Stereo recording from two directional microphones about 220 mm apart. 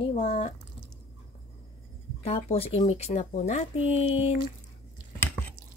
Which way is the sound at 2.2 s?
25° left (ahead or behind).